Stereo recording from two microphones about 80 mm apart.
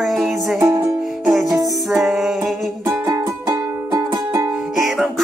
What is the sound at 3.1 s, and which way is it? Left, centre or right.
Music, right.